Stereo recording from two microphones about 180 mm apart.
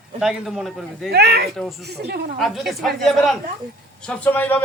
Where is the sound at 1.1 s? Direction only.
65° right (ahead or behind).